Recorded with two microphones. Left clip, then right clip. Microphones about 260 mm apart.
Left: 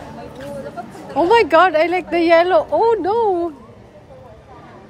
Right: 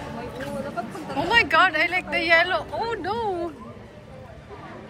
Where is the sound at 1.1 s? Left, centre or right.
Left.